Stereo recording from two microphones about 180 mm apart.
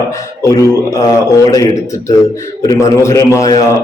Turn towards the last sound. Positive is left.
turn(degrees=20)  # may be behind; listen again after turning